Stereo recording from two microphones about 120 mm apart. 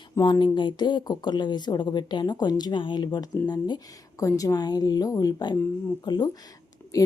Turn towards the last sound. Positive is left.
turn(degrees=30)  # may be behind; listen again after turning